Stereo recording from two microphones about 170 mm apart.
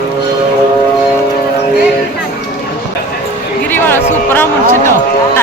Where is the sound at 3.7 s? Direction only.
10° left (ahead or behind).